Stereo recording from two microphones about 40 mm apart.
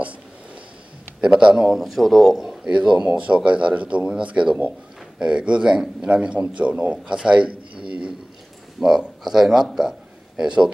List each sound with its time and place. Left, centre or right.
1.2 s speech: right; by 2.2 s centre
2.2 s speech: centre
2.6 s a man's voice: right
6.0 s a man's voice: right
7.1 s a sound: right
8.7 s speech: centre
9.8 s a sound: centre